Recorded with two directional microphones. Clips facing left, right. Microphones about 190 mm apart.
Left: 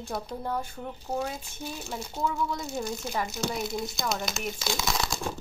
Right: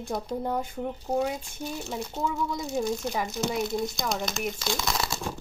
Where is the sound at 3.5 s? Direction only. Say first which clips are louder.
Right 4 dB; centre (ahead or behind).